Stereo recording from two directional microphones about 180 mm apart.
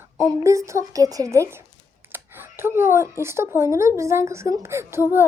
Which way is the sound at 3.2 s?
15° right (ahead or behind).